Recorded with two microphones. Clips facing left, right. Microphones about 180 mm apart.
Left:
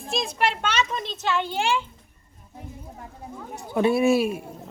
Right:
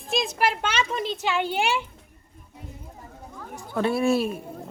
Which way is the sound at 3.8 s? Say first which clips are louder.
Left 3 dB; 15° left (ahead or behind).